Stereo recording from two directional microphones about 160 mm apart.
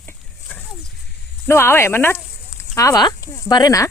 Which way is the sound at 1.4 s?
15° left (ahead or behind).